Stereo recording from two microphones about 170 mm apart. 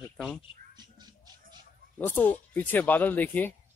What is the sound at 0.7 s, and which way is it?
Music, 25° right (ahead or behind).